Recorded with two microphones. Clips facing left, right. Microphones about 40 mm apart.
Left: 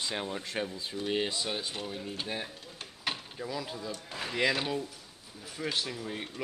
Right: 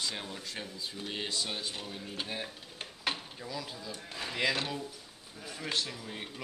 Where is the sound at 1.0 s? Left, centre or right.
Centre.